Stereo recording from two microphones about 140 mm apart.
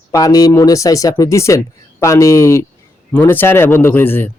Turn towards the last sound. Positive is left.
turn(degrees=15)  # may be behind; listen again after turning